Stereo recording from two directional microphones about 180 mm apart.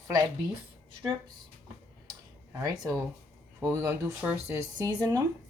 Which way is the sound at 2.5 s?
20° right (ahead or behind).